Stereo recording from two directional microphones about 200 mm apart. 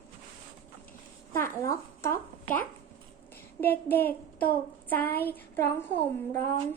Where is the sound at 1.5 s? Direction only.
15° left (ahead or behind).